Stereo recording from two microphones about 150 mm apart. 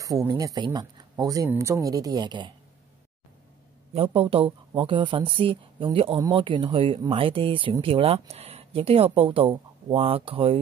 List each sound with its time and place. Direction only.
0.0 s speech: 20° right (ahead or behind)
3.9 s speech: 35° right (ahead or behind)